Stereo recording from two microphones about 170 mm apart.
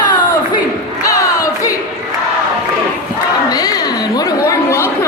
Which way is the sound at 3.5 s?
20° left (ahead or behind).